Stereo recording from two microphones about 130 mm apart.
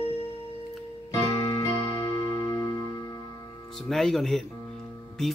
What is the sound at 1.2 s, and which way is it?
Music, 50° left (ahead or behind).